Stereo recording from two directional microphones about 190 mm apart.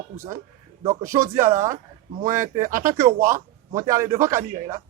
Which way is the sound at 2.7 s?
45° right (ahead or behind).